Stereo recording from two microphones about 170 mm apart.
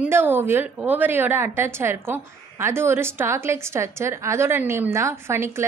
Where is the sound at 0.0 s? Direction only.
10° right (ahead or behind).